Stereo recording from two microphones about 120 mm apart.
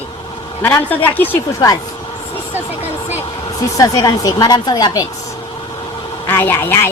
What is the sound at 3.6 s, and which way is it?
Speech, 30° left (ahead or behind).